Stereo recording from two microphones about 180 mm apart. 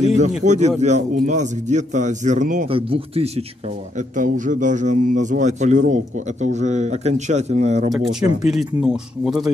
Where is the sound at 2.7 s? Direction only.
30° right (ahead or behind).